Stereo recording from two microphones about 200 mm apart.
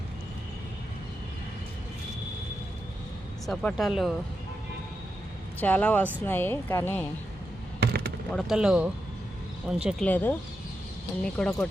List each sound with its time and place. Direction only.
3.4 s speech: 5° left (ahead or behind)
5.5 s speech: 10° left (ahead or behind)
7.8 s a sound: 55° right (ahead or behind)
8.3 s speech: centre (ahead or behind)
10.1 s speech: 10° left (ahead or behind)